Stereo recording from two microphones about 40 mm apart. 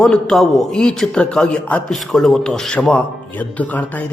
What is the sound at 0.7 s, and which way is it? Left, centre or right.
A man's voice, centre.